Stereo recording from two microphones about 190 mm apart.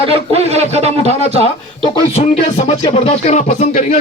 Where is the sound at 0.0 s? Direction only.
30° right (ahead or behind).